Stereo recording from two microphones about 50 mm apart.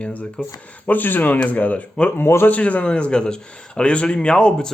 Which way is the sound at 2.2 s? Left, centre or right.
Left.